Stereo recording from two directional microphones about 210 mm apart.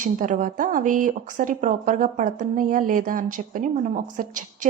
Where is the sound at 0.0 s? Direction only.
35° right (ahead or behind).